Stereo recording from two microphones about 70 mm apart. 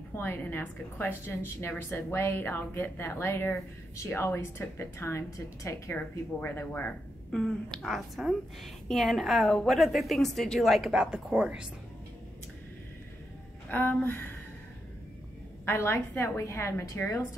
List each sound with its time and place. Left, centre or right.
0.1 s a woman's voice: left
3.9 s a woman's voice: left
5.9 s a woman's voice: left
7.2 s a woman's voice: centre
10.9 s speech: centre
13.7 s speech: left
15.6 s a woman's voice: left